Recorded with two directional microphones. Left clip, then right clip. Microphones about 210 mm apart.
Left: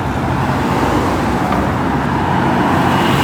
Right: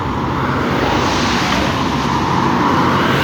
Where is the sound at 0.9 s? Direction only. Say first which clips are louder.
Even; 55° left (ahead or behind).